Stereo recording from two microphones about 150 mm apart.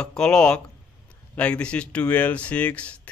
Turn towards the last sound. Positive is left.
turn(degrees=10)  # may be behind; listen again after turning